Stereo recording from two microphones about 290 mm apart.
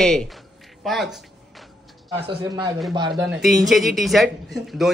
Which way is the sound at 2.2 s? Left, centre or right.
Centre.